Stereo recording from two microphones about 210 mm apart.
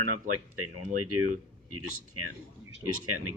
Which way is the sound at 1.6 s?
90° right.